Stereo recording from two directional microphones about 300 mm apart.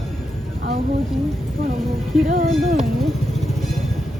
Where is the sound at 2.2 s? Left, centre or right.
Right.